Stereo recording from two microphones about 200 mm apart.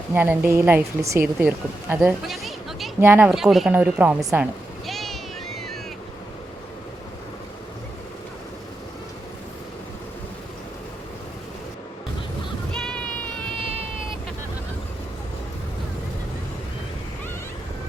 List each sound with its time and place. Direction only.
0.1 s speech: 10° right (ahead or behind)
3.0 s a woman's voice: 10° right (ahead or behind)
4.9 s vehicle: centre (ahead or behind)
12.7 s a sound: 5° left (ahead or behind)
13.6 s vehicle: 30° right (ahead or behind)